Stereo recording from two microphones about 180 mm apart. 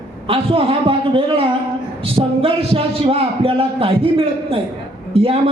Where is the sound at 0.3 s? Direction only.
30° right (ahead or behind).